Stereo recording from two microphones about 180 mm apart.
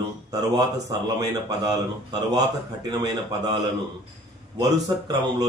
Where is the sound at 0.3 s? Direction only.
20° right (ahead or behind).